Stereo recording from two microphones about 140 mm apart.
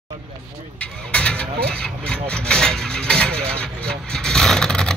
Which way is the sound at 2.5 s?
5° left (ahead or behind).